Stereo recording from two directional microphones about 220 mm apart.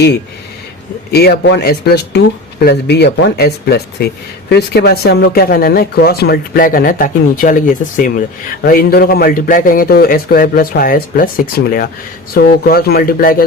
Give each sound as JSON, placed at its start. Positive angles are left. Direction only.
{"t": 1.1, "sound": "a man's voice", "side_deg": 45}